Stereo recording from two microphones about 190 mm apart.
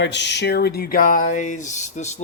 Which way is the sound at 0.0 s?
65° left (ahead or behind).